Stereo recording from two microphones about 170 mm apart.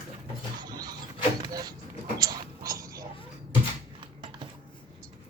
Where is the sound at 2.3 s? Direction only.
20° right (ahead or behind).